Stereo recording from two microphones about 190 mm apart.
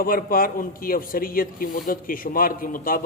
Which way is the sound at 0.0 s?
50° left (ahead or behind).